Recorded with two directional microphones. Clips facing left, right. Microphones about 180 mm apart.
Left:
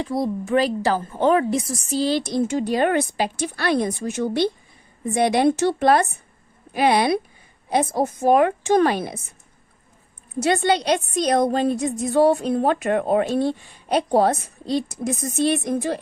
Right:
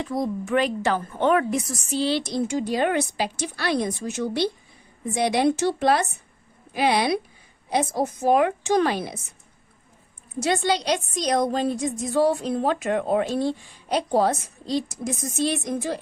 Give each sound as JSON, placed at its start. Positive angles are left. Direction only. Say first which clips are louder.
{"t": 0.0, "sound": "a woman's voice", "louder": "left 2 dB", "side_deg": 35}
{"t": 10.4, "sound": "a woman's voice", "louder": "left 3 dB", "side_deg": 55}